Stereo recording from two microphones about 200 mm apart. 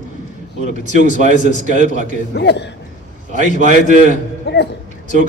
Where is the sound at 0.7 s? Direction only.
35° right (ahead or behind).